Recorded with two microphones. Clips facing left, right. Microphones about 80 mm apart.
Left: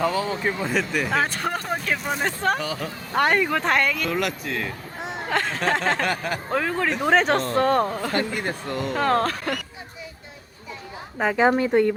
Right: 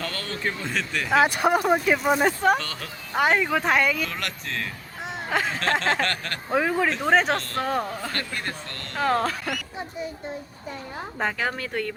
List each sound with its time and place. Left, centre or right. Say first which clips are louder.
0.0 s speech: left 7 dB; centre
1.1 s speech: right 8 dB; centre
2.6 s speech: left 5 dB; centre
3.2 s speech: left 1 dB; centre
6.5 s speech: right 2 dB; centre
8.1 s speech: left 6 dB; centre
9.0 s speech: left 1 dB; centre
11.3 s speech: left 10 dB; left